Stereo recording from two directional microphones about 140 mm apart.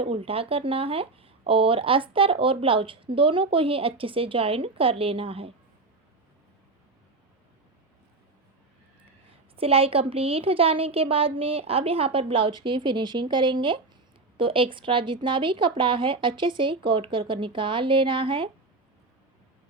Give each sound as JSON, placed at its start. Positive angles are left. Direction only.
{"t": 0.0, "sound": "a woman's voice", "side_deg": -45}
{"t": 9.6, "sound": "a woman's voice", "side_deg": -45}